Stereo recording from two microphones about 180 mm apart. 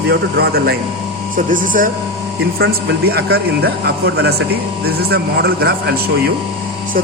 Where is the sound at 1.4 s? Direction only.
50° right (ahead or behind).